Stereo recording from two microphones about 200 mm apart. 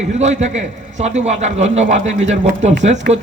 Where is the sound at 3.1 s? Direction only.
50° right (ahead or behind).